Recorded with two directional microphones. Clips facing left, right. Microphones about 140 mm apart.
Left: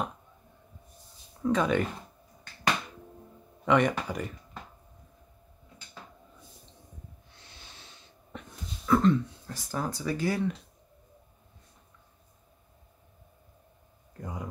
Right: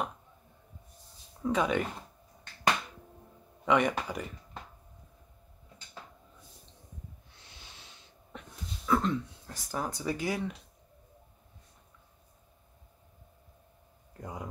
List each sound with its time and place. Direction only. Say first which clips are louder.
1.4 s speech: left 3 dB; 10° right (ahead or behind)
3.6 s speech: left 2 dB; 5° right (ahead or behind)
8.8 s speech: left 5 dB; 5° right (ahead or behind)
14.2 s a man's voice: left 2 dB; 20° right (ahead or behind)